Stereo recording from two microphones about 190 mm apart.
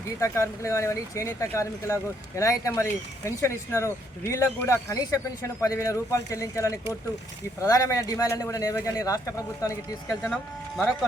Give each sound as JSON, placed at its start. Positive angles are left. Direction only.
{"t": 0.2, "sound": "speech", "side_deg": 15}
{"t": 10.3, "sound": "speech", "side_deg": 5}